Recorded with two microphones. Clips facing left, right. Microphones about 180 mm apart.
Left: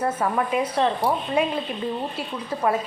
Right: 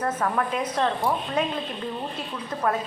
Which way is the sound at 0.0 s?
10° left (ahead or behind).